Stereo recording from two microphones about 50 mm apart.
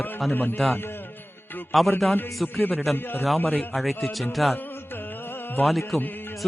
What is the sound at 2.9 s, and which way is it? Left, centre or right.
Speech, left.